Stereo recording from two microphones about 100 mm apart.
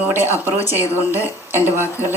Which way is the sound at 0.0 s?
20° right (ahead or behind).